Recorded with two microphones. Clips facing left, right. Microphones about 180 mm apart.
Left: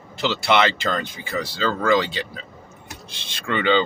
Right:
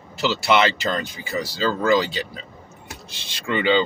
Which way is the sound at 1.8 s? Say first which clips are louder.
Even; 5° right (ahead or behind).